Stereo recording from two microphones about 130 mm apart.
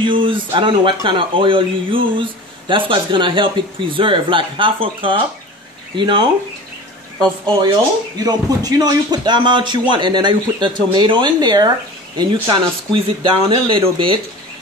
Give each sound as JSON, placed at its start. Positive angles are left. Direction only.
{"t": 0.0, "sound": "speech", "side_deg": -40}
{"t": 8.2, "sound": "speech", "side_deg": -30}